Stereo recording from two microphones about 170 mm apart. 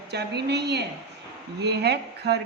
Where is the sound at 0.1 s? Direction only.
75° right (ahead or behind).